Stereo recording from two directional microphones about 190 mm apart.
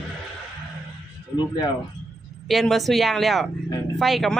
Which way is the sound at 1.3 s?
20° left (ahead or behind).